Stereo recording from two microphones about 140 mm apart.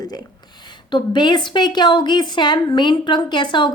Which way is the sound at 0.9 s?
35° left (ahead or behind).